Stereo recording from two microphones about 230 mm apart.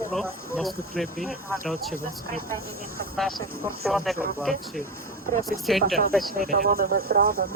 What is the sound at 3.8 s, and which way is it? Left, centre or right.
Speech, centre.